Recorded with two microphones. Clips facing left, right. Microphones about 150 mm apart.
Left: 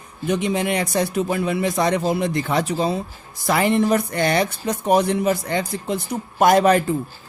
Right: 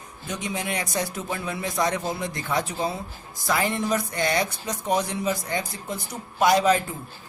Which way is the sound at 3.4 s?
65° left (ahead or behind).